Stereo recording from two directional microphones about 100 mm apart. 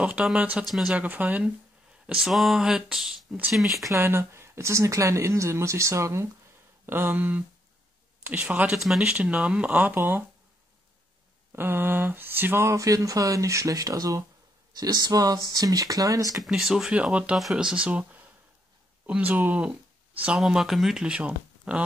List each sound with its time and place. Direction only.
0.0 s speech: 10° right (ahead or behind)
0.7 s speech: 5° right (ahead or behind)
0.9 s speech: 15° right (ahead or behind)
2.0 s speech: 5° right (ahead or behind)
3.9 s speech: 25° right (ahead or behind)
8.7 s speech: 5° right (ahead or behind); by 10.2 s 20° right (ahead or behind)
11.5 s speech: 20° right (ahead or behind)
16.3 s speech: 5° right (ahead or behind)